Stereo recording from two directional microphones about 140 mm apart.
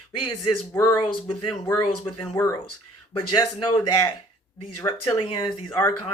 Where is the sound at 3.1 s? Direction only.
30° left (ahead or behind).